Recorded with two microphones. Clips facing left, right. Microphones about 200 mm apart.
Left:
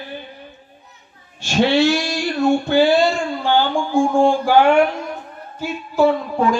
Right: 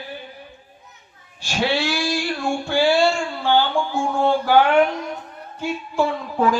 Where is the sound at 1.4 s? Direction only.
25° left (ahead or behind).